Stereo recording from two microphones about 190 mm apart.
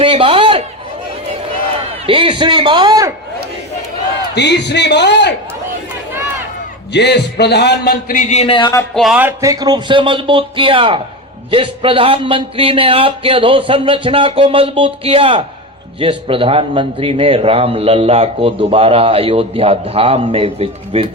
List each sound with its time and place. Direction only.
0.0 s a sound: 30° right (ahead or behind)
2.0 s a man's voice: 25° right (ahead or behind)
4.4 s a man's voice: 65° left (ahead or behind)
6.9 s a man's voice: 60° left (ahead or behind); by 8.8 s 25° left (ahead or behind)
9.0 s a man's voice: 5° right (ahead or behind); by 21.1 s 30° right (ahead or behind)